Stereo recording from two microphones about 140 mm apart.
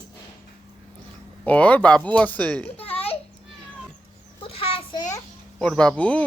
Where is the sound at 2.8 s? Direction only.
45° left (ahead or behind).